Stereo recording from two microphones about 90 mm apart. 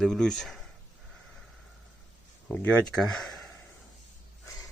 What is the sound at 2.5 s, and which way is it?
Speech, 15° left (ahead or behind).